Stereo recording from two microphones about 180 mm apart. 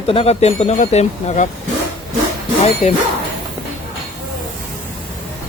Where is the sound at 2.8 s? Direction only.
35° left (ahead or behind).